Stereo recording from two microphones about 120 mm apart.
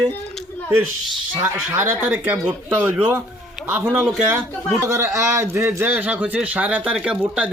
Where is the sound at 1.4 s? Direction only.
20° right (ahead or behind).